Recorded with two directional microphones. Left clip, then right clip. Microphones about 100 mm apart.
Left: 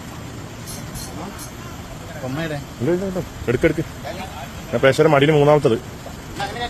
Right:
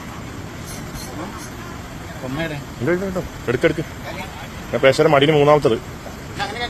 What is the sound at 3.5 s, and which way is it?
Speech, 40° left (ahead or behind).